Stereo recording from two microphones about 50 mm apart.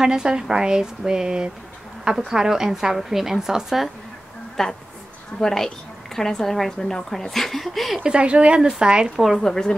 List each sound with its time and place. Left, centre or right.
0.0 s a woman's voice: centre
4.6 s a woman's voice: centre
8.0 s a woman's voice: right
9.4 s a woman's voice: centre